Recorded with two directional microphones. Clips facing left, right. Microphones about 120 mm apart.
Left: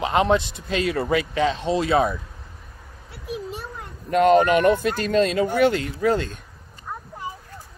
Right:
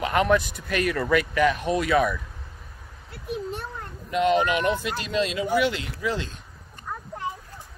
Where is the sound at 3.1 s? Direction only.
Centre (ahead or behind).